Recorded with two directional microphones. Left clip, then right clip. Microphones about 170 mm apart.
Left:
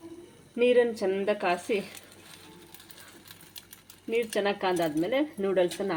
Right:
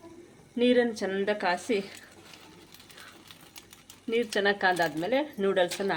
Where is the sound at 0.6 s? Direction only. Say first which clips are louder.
Left 2 dB; 15° right (ahead or behind).